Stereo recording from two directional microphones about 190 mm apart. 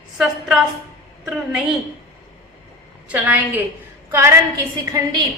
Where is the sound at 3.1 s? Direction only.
5° right (ahead or behind).